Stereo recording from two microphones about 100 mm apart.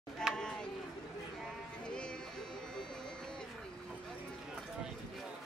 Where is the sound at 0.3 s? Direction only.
5° left (ahead or behind).